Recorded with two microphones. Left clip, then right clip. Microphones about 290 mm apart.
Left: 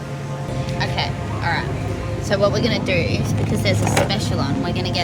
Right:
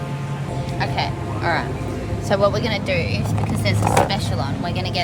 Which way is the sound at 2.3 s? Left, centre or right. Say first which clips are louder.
Even; centre.